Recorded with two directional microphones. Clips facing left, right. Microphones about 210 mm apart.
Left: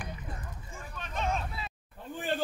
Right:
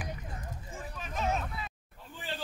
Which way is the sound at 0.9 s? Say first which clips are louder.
Even; 5° right (ahead or behind).